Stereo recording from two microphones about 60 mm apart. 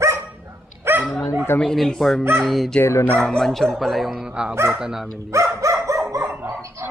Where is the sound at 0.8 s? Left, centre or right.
Right.